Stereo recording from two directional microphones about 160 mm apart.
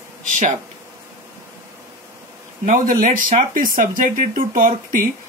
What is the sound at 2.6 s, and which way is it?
Speech, 60° right (ahead or behind).